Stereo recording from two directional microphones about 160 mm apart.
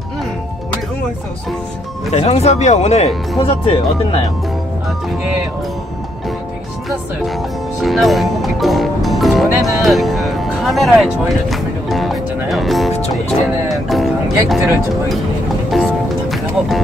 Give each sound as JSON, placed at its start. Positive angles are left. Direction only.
{"t": 2.0, "sound": "speech", "side_deg": 40}
{"t": 7.8, "sound": "speech", "side_deg": 0}
{"t": 13.7, "sound": "music", "side_deg": 0}
{"t": 15.7, "sound": "music", "side_deg": 0}